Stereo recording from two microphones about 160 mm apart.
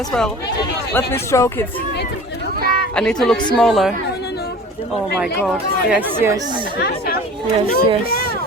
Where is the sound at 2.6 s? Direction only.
85° left.